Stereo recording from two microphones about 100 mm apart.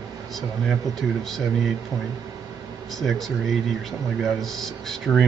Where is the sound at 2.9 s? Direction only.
Centre (ahead or behind).